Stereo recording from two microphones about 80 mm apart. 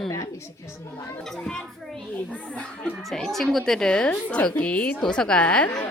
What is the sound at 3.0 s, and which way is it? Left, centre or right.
A woman's voice, centre.